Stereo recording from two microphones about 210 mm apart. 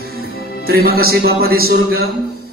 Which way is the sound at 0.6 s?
45° right (ahead or behind).